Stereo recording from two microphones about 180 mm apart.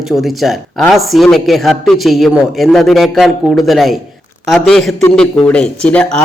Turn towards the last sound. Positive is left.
turn(degrees=5)  # may be behind; listen again after turning